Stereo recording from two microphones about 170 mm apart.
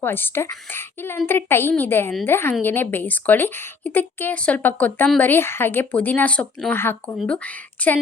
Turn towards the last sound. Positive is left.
turn(degrees=10)  # may be behind; listen again after turning